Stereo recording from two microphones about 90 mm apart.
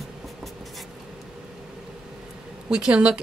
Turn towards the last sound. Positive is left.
turn(degrees=-10)  # may be behind; listen again after turning